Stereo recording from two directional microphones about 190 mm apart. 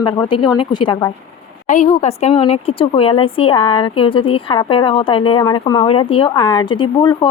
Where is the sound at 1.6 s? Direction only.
40° left (ahead or behind).